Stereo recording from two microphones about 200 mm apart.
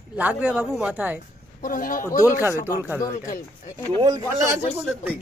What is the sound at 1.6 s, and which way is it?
Speech, 45° left (ahead or behind).